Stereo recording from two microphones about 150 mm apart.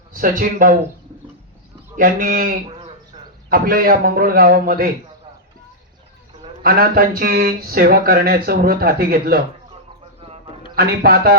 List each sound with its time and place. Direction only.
0.1 s speech: 65° right (ahead or behind)
2.0 s a man's voice: 65° right (ahead or behind)
2.6 s a sound: 35° right (ahead or behind)
3.5 s a man's voice: 75° right (ahead or behind)
6.6 s speech: 80° right
10.8 s a man's voice: 90° right